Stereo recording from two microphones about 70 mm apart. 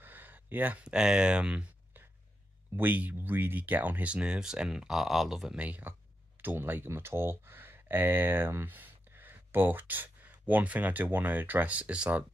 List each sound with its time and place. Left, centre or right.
0.0 s a sound: right
0.8 s speech: centre
2.7 s speech: right; by 5.6 s centre
5.6 s speech: right